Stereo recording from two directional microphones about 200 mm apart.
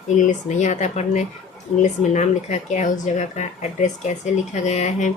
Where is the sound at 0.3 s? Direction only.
35° left (ahead or behind).